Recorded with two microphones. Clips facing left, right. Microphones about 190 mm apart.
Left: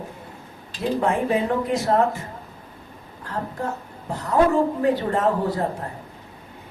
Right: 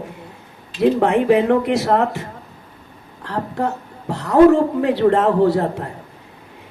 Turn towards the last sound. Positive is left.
turn(degrees=-70)  # may be behind; listen again after turning